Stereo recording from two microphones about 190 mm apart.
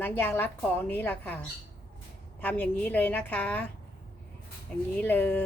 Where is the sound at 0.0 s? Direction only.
10° left (ahead or behind).